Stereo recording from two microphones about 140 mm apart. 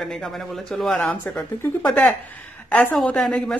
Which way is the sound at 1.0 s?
15° left (ahead or behind).